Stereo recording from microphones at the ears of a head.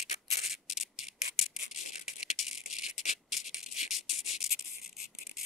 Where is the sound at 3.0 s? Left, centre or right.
Left.